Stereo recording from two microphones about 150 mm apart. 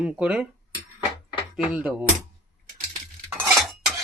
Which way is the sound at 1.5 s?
5° right (ahead or behind).